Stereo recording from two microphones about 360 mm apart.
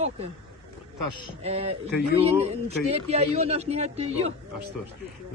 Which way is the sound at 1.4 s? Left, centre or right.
Centre.